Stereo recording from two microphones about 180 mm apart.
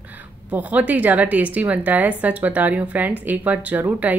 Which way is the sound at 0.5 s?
10° right (ahead or behind).